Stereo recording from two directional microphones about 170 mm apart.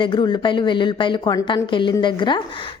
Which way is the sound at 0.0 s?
25° left (ahead or behind).